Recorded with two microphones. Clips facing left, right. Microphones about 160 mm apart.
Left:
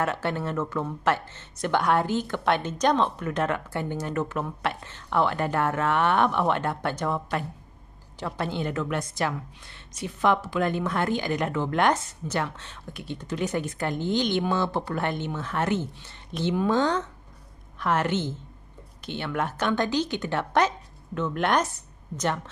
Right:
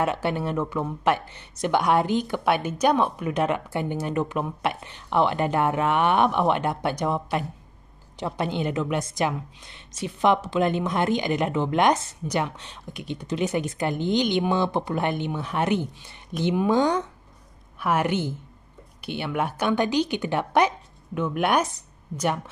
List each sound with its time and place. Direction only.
0.0 s a woman's voice: 15° right (ahead or behind)